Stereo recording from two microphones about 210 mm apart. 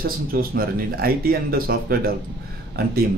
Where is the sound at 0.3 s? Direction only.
45° right (ahead or behind).